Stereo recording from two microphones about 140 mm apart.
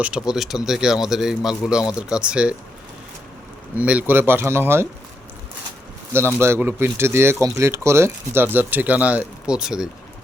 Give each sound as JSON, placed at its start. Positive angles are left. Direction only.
{"t": 0.0, "sound": "speech", "side_deg": -5}
{"t": 3.8, "sound": "speech", "side_deg": -10}
{"t": 6.1, "sound": "speech", "side_deg": -20}